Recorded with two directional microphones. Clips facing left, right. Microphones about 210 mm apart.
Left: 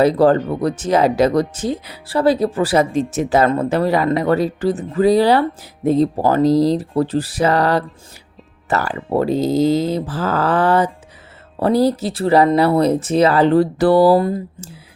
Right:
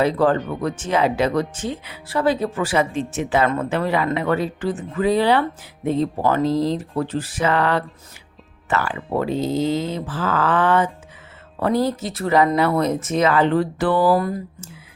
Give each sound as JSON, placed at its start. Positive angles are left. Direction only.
{"t": 0.0, "sound": "speech", "side_deg": 35}